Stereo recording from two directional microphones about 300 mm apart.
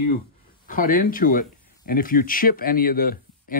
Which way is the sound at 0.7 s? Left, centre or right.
Left.